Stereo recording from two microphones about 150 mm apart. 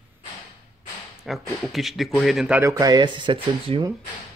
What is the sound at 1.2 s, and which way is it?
A man's voice, centre (ahead or behind).